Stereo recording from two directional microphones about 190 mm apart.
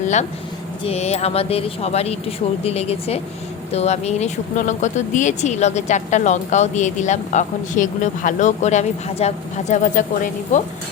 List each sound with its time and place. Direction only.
0.9 s speech: 35° left (ahead or behind)